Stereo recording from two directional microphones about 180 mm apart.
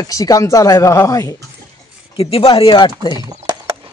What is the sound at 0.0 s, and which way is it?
Speech, 20° left (ahead or behind).